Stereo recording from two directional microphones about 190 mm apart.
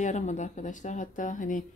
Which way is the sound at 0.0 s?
40° left (ahead or behind).